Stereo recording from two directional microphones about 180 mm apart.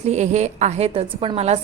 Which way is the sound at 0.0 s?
40° right (ahead or behind).